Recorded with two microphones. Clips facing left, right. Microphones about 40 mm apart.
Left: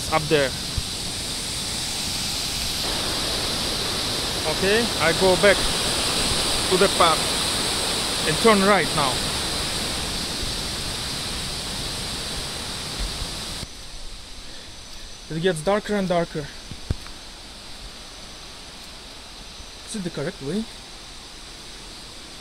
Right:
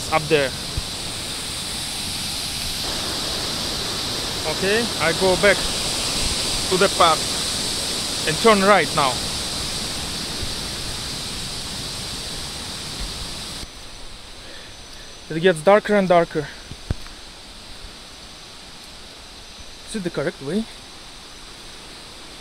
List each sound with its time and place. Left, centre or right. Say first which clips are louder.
0.0 s pink noise: right 2 dB; centre
8.3 s speech: right 2 dB; centre
9.1 s pink noise: left 1 dB; centre
15.3 s speech: right 7 dB; right
19.9 s speech: right 4 dB; centre